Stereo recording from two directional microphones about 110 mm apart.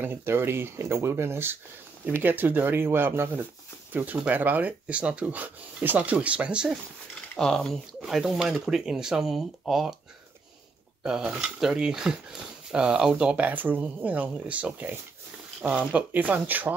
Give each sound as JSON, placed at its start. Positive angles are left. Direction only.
{"t": 0.0, "sound": "speech", "side_deg": -20}
{"t": 7.3, "sound": "speech", "side_deg": 5}
{"t": 11.0, "sound": "speech", "side_deg": -5}